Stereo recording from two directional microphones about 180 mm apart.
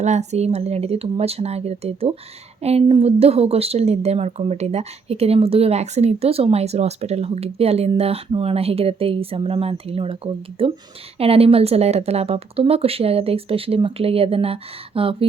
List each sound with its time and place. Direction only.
0.0 s a woman's voice: 40° right (ahead or behind)